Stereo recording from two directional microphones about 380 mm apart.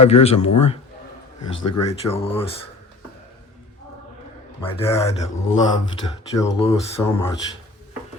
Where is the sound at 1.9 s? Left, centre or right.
Centre.